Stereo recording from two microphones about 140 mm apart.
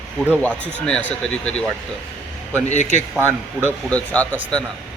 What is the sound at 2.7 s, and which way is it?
Speech, 55° left (ahead or behind).